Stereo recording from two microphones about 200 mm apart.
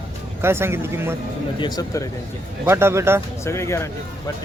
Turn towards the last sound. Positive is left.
turn(degrees=15)  # may be behind; listen again after turning